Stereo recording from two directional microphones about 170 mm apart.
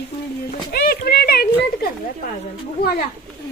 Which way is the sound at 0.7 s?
65° left (ahead or behind).